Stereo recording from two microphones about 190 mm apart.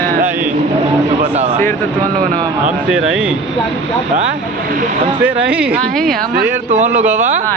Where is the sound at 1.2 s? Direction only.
40° right (ahead or behind).